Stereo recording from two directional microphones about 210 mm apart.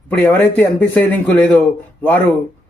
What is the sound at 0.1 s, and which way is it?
Speech, 5° left (ahead or behind).